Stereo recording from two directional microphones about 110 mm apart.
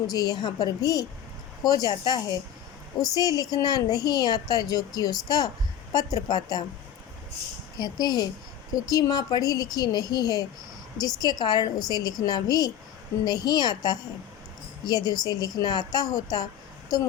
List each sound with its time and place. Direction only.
0.1 s a woman's voice: 35° left (ahead or behind)
7.8 s a woman's voice: 40° left (ahead or behind)